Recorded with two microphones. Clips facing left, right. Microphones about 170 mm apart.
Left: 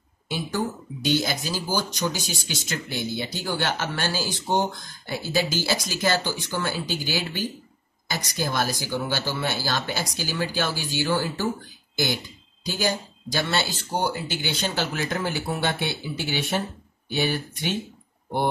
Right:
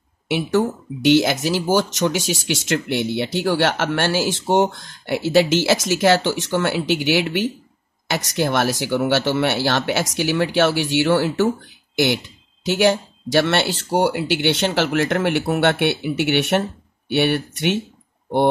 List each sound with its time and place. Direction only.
0.3 s speech: 80° right